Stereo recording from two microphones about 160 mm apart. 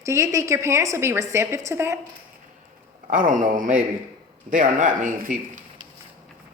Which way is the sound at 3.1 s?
55° right (ahead or behind).